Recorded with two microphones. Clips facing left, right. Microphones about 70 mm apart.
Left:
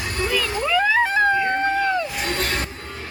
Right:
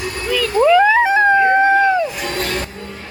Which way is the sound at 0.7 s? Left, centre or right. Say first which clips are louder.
Right 6 dB; centre.